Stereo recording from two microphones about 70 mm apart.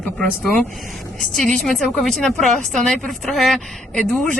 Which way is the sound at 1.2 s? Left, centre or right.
Centre.